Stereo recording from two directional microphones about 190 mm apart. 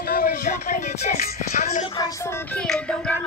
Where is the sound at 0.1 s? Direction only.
50° left (ahead or behind).